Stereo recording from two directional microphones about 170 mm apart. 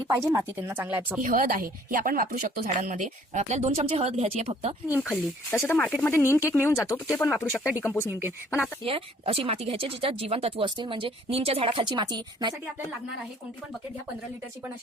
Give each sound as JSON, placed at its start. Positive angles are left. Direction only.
{"t": 0.3, "sound": "speech", "side_deg": -15}
{"t": 1.2, "sound": "speech", "side_deg": -55}
{"t": 4.9, "sound": "speech", "side_deg": 0}
{"t": 5.1, "sound": "speech", "side_deg": 10}
{"t": 7.2, "sound": "speech", "side_deg": 0}
{"t": 7.8, "sound": "speech", "side_deg": 15}
{"t": 8.0, "sound": "speech", "side_deg": -10}
{"t": 8.8, "sound": "speech", "side_deg": -35}